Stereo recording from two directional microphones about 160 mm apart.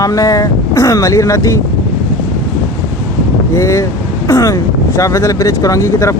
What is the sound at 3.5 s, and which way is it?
Speech, 20° left (ahead or behind).